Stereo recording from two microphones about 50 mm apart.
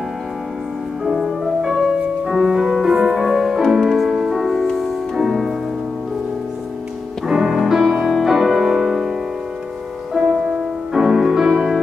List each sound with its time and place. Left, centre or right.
1.0 s music: centre
7.2 s music: centre
10.9 s music: centre